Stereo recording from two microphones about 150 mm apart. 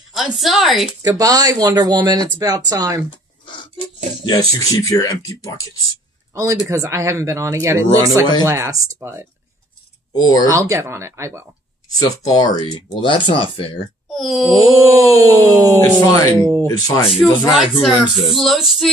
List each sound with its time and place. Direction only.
0.1 s speech: centre (ahead or behind)
1.0 s speech: 25° right (ahead or behind)
4.5 s speech: 25° left (ahead or behind)
6.3 s speech: 20° right (ahead or behind)
10.1 s speech: 25° left (ahead or behind)
10.5 s speech: 20° right (ahead or behind)
11.9 s speech: 25° left (ahead or behind)
14.1 s speech: centre (ahead or behind)
14.9 s speech: 20° right (ahead or behind)
16.1 s speech: 25° left (ahead or behind)
16.3 s speech: 20° right (ahead or behind)
16.6 s speech: 20° left (ahead or behind)
17.6 s speech: centre (ahead or behind)